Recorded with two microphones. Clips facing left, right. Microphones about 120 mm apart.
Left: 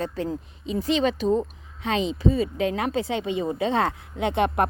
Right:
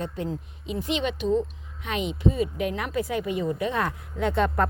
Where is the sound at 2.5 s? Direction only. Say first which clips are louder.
Left 3 dB; 90° left.